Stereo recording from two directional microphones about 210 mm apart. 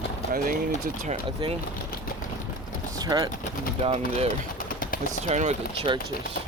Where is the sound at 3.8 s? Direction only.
30° right (ahead or behind).